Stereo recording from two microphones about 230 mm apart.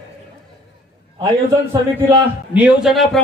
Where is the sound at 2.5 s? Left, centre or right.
Centre.